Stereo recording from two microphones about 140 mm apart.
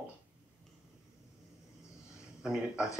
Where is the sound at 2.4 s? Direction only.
5° right (ahead or behind).